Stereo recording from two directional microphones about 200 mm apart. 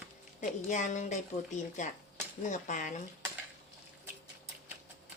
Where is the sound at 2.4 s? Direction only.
40° left (ahead or behind).